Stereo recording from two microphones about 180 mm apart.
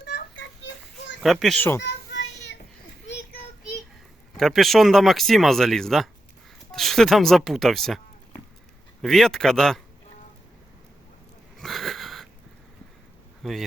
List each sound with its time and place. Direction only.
0.0 s children playing: 75° left (ahead or behind)
1.2 s speech: centre (ahead or behind)
1.8 s child singing: 75° left (ahead or behind)
4.4 s speech: centre (ahead or behind)
11.6 s wheeze: centre (ahead or behind)
13.4 s speech: centre (ahead or behind)